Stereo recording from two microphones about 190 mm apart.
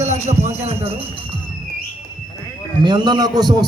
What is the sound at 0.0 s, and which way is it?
Speech, 35° right (ahead or behind).